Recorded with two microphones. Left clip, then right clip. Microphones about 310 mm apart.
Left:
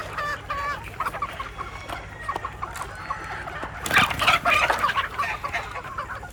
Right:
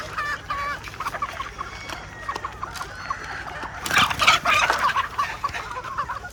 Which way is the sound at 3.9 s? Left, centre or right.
Centre.